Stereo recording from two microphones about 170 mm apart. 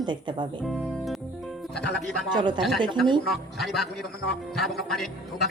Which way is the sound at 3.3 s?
Centre (ahead or behind).